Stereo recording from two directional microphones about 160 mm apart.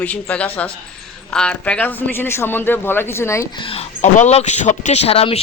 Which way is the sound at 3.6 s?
40° left (ahead or behind).